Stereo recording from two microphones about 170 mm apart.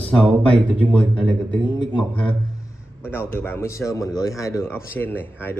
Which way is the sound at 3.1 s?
15° left (ahead or behind).